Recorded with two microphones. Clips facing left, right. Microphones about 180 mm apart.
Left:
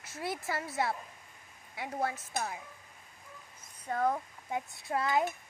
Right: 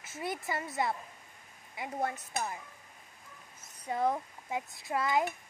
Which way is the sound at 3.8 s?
15° right (ahead or behind).